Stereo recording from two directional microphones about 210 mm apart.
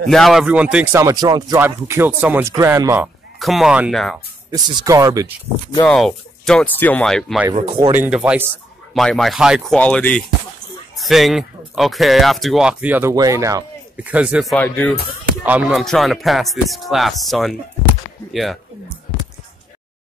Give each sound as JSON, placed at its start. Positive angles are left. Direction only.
{"t": 0.1, "sound": "speech", "side_deg": 0}
{"t": 1.0, "sound": "speech", "side_deg": -20}
{"t": 3.3, "sound": "speech", "side_deg": 0}
{"t": 4.5, "sound": "speech", "side_deg": -15}
{"t": 5.8, "sound": "speech", "side_deg": 5}
{"t": 7.5, "sound": "speech", "side_deg": -25}
{"t": 7.9, "sound": "speech", "side_deg": -5}